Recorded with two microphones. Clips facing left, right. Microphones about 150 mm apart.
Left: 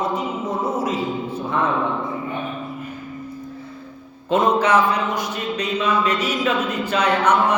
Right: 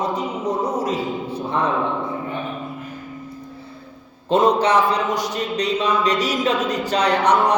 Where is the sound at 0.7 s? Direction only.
40° right (ahead or behind).